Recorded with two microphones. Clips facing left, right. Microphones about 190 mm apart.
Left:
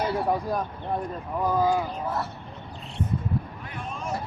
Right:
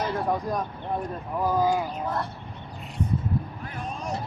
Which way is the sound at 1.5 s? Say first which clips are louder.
Left 1 dB; 10° right (ahead or behind).